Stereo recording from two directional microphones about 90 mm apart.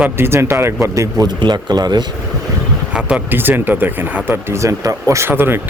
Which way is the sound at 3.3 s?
20° right (ahead or behind).